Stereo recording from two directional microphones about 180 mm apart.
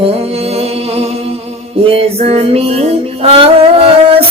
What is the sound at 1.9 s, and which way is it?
Music, 35° right (ahead or behind).